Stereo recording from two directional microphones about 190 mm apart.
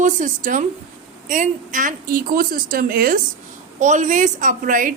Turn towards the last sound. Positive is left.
turn(degrees=-45)  # may be behind; listen again after turning